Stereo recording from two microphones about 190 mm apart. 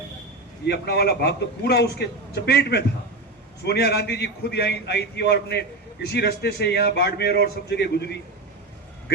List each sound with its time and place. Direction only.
0.6 s a man's voice: 60° left (ahead or behind)